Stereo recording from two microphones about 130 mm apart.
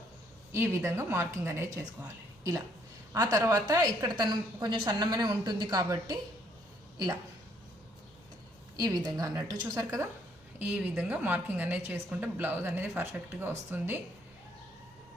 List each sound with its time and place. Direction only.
0.5 s a woman's voice: 20° right (ahead or behind)
8.8 s speech: 30° right (ahead or behind)
10.6 s a woman's voice: 10° right (ahead or behind)